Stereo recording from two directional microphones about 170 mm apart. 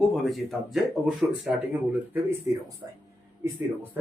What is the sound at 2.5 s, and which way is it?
Speech, 15° right (ahead or behind).